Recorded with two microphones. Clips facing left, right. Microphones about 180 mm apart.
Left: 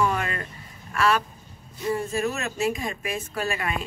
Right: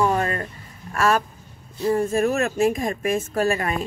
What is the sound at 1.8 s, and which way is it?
A woman's voice, 45° right (ahead or behind).